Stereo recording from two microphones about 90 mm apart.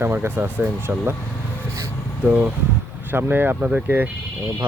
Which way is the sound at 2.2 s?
15° right (ahead or behind).